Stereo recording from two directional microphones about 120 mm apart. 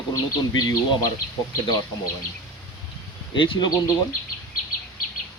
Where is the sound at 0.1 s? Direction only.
30° left (ahead or behind).